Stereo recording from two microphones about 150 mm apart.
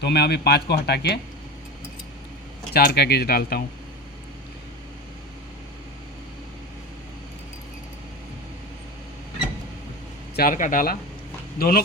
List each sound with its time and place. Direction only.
0.0 s speech: 90° left
2.7 s speech: 90° left
10.3 s speech: 70° left (ahead or behind)
11.5 s speech: 80° left